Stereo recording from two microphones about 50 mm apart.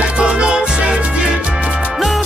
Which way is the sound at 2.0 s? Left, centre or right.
Centre.